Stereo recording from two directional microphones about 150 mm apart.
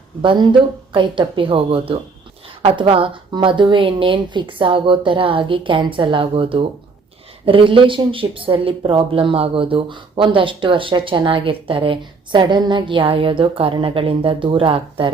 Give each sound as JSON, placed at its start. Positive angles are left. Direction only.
{"t": 0.2, "sound": "speech", "side_deg": -30}